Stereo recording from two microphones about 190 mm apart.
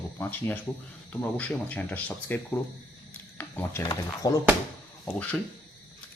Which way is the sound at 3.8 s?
20° left (ahead or behind).